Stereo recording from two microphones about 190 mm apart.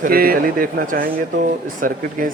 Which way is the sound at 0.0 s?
50° right (ahead or behind).